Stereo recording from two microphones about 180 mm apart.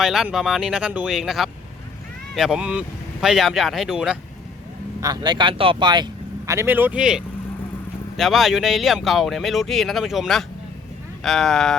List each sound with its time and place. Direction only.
0.0 s speech: centre (ahead or behind)
4.9 s speech: 20° right (ahead or behind)
6.5 s speech: 10° right (ahead or behind)